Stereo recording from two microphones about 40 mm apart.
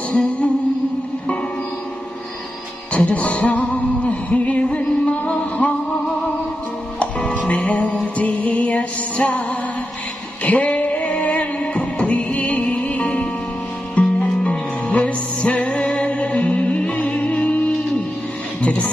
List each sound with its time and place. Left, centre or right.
0.1 s music: left
3.2 s music: left
7.0 s music: left
7.3 s music: left